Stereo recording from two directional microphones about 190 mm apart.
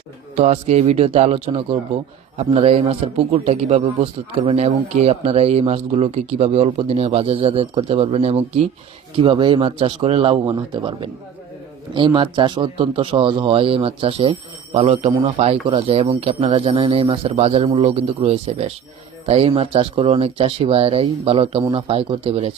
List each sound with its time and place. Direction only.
0.3 s a man's voice: 35° right (ahead or behind)